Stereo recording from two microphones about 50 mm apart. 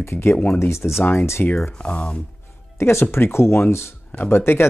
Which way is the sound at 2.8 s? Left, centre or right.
Left.